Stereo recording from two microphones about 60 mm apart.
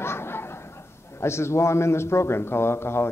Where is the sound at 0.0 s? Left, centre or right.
Left.